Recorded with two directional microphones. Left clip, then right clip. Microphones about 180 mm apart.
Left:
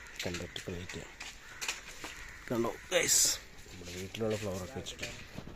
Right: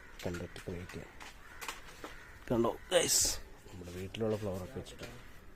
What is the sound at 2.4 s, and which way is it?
Speech, 15° right (ahead or behind).